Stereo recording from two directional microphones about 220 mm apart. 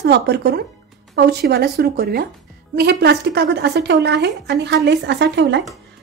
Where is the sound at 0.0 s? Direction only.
50° right (ahead or behind).